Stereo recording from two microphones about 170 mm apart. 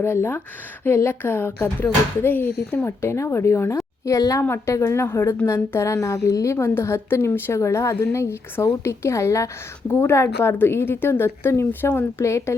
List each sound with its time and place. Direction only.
0.0 s a woman's voice: 15° left (ahead or behind)